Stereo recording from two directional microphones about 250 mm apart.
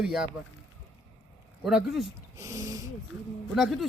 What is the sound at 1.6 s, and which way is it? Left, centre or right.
Speech, centre.